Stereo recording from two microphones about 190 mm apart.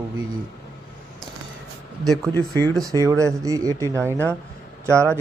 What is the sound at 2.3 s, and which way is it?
Speech, 10° left (ahead or behind).